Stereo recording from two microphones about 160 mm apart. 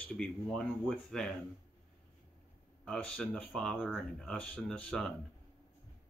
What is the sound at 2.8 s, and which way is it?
Speech, 5° left (ahead or behind).